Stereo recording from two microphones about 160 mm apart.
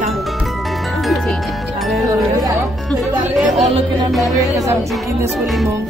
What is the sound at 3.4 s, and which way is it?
Speech, 40° right (ahead or behind).